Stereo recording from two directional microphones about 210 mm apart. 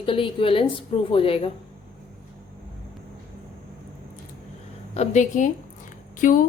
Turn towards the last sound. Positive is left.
turn(degrees=40)  # may be behind; listen again after turning